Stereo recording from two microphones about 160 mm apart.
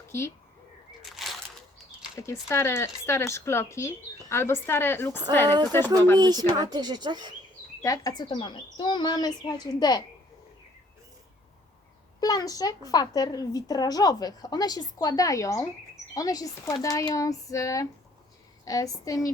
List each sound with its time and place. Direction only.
1.0 s a sound: centre (ahead or behind)
2.1 s speech: 20° left (ahead or behind)
6.1 s speech: 25° right (ahead or behind)
7.8 s a woman's voice: 20° left (ahead or behind)
12.2 s a woman's voice: 25° left (ahead or behind)